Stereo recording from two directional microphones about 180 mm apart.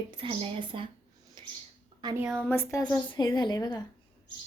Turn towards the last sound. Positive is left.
turn(degrees=20)  # may be behind; listen again after turning